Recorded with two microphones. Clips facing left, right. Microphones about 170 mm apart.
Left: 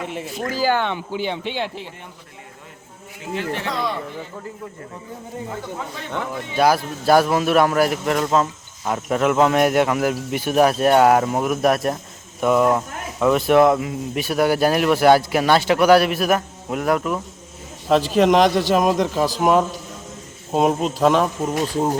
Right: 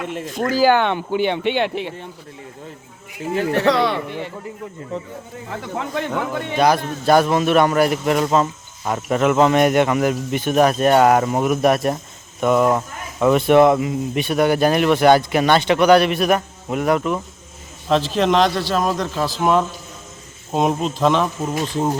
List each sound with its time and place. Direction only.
0.3 s speech: 70° right (ahead or behind)
3.6 s speech: 75° right (ahead or behind)
5.7 s speech: 70° right (ahead or behind)
6.6 s a man's voice: 5° left (ahead or behind)